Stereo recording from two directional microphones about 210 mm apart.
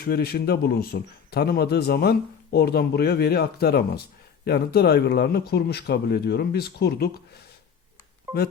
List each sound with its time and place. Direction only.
0.0 s speech: 45° left (ahead or behind)